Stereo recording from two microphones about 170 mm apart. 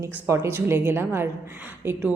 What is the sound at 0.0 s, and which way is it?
A woman's voice, 15° right (ahead or behind).